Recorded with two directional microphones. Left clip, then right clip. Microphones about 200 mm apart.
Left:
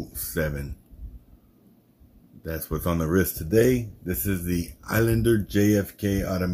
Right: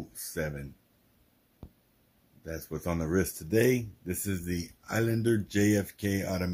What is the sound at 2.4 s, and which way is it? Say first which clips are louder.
Speech: left 6 dB; 5° right (ahead or behind).